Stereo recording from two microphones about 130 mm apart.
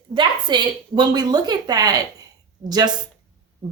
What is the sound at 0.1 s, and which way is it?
Speech, 35° right (ahead or behind).